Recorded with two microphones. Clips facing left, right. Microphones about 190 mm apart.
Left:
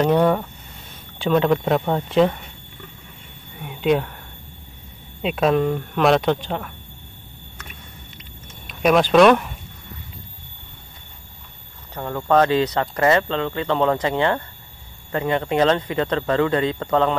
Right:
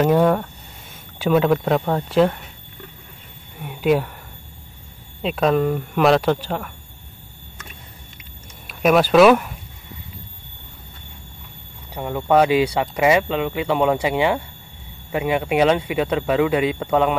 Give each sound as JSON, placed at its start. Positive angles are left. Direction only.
{"t": 0.0, "sound": "speech", "side_deg": -5}
{"t": 3.5, "sound": "a sound", "side_deg": 0}
{"t": 5.2, "sound": "speech", "side_deg": 0}
{"t": 8.6, "sound": "speech", "side_deg": -5}
{"t": 11.9, "sound": "speech", "side_deg": -15}